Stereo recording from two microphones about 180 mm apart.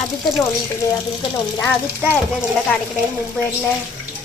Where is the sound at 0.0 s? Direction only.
Centre (ahead or behind).